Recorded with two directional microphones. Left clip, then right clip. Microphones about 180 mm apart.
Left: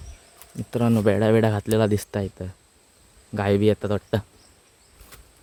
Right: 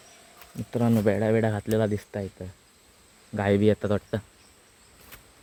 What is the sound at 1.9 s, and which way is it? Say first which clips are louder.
Speech: left 6 dB; 40° left (ahead or behind).